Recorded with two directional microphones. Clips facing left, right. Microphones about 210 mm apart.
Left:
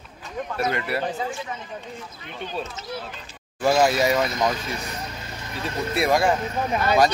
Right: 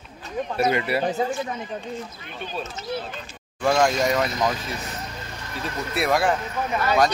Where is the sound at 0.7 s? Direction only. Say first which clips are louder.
Right 3 dB; 5° right (ahead or behind).